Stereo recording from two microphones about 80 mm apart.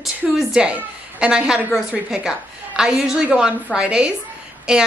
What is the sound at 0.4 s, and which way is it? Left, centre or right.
A woman's voice, centre.